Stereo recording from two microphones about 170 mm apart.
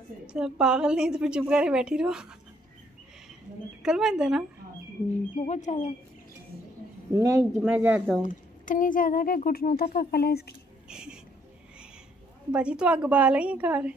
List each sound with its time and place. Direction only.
0.3 s a woman's voice: 5° right (ahead or behind)
3.8 s a woman's voice: 5° right (ahead or behind)
5.3 s speech: 45° left (ahead or behind)
7.2 s a woman's voice: 15° right (ahead or behind)
8.2 s speech: 50° left (ahead or behind); by 10.5 s 70° left (ahead or behind)
10.9 s speech: 5° right (ahead or behind)
12.4 s a woman's voice: 5° right (ahead or behind)